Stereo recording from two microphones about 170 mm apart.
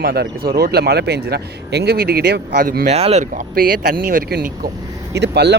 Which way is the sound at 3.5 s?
55° right (ahead or behind).